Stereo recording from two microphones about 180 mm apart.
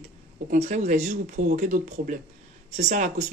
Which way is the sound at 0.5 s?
40° right (ahead or behind).